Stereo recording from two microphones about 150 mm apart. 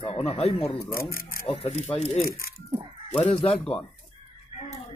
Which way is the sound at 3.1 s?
45° left (ahead or behind).